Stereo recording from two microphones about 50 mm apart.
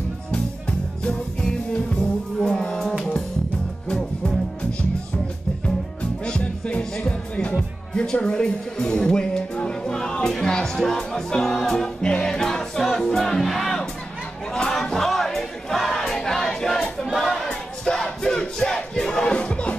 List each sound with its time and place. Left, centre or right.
0.3 s music: centre
2.3 s music: centre
2.6 s music: centre
3.9 s music: centre
6.2 s music: centre
17.1 s choir: centre
17.8 s music: centre
18.9 s battle cry: centre
19.3 s music: left